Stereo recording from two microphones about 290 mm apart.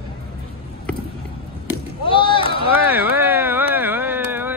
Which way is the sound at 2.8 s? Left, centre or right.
Centre.